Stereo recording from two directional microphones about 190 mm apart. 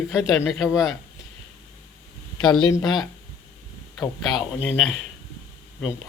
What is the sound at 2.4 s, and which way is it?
Speech, 25° left (ahead or behind).